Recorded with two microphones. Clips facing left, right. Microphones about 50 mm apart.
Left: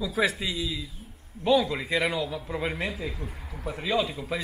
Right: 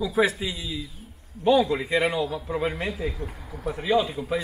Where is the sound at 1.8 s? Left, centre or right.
Right.